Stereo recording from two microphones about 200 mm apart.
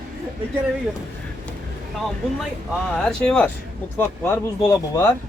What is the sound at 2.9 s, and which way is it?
A man's voice, 5° left (ahead or behind).